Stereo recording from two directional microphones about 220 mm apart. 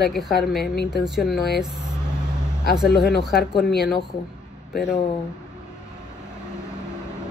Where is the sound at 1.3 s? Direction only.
50° left (ahead or behind).